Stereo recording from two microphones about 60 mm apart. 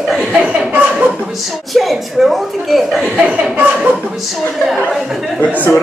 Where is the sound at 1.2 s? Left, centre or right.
Centre.